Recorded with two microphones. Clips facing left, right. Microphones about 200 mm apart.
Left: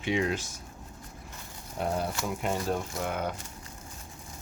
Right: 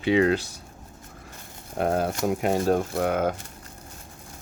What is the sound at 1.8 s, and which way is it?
Speech, 65° right (ahead or behind).